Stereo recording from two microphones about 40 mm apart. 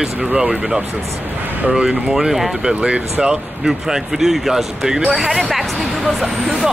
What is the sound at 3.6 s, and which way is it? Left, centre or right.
Speech, centre.